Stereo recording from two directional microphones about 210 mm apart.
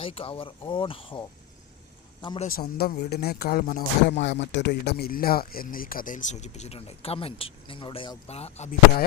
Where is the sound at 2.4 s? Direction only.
45° left (ahead or behind).